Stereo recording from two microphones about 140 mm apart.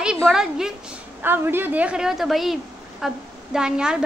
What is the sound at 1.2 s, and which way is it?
A woman's voice, 15° right (ahead or behind).